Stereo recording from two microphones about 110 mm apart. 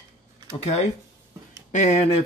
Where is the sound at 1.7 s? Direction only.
90° left.